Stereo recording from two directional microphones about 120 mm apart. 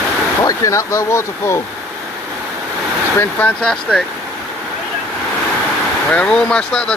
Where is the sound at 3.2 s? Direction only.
15° left (ahead or behind).